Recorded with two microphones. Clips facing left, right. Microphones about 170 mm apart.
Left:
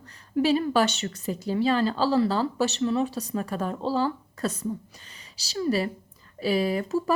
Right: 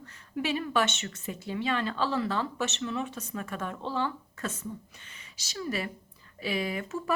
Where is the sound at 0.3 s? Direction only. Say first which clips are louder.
Left 7 dB; 35° left (ahead or behind).